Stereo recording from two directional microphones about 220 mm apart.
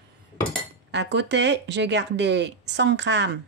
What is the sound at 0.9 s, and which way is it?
Speech, 50° right (ahead or behind).